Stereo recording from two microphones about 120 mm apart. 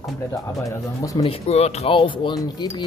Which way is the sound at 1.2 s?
60° left (ahead or behind).